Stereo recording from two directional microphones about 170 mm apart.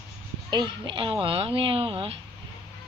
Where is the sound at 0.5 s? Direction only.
25° right (ahead or behind).